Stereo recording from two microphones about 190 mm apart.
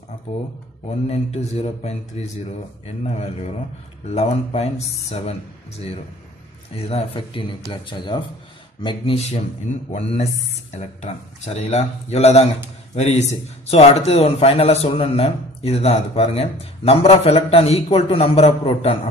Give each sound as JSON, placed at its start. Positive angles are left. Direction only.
{"t": 0.8, "sound": "a man's voice", "side_deg": 35}
{"t": 3.0, "sound": "a man's voice", "side_deg": 35}
{"t": 6.9, "sound": "a man's voice", "side_deg": 30}